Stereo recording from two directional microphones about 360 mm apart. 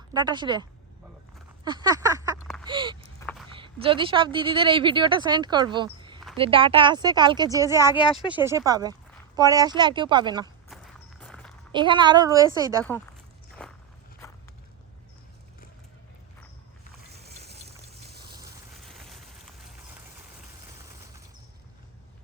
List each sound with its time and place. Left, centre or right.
0.1 s speech: centre
1.6 s a sound: centre
2.6 s speech: centre
3.2 s a sound: centre
3.5 s speech: centre
10.7 s walk: centre
11.7 s speech: centre
13.6 s walk: centre
17.1 s boat: right
18.9 s a sound: centre